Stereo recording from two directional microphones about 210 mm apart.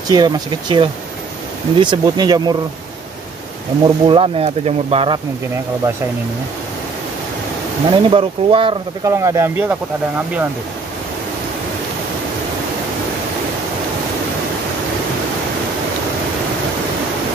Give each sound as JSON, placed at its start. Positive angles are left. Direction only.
{"t": 0.1, "sound": "speech", "side_deg": -20}
{"t": 3.8, "sound": "speech", "side_deg": -25}
{"t": 7.9, "sound": "speech", "side_deg": -25}
{"t": 9.1, "sound": "speech", "side_deg": -15}